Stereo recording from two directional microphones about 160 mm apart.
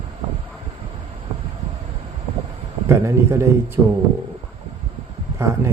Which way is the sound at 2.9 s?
15° right (ahead or behind).